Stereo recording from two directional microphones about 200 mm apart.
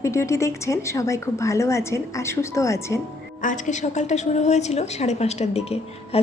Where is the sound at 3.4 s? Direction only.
40° left (ahead or behind).